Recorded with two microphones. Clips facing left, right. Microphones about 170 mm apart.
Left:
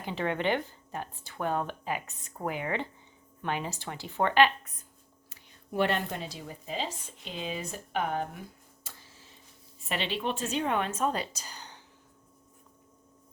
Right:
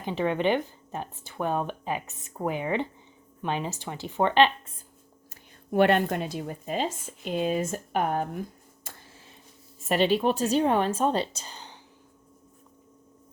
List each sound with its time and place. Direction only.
0.0 s speech: 15° right (ahead or behind)
5.3 s speech: 60° right (ahead or behind)
8.8 s tick-tock: 60° right (ahead or behind)
9.9 s a woman's voice: 45° right (ahead or behind); by 11.8 s 25° right (ahead or behind)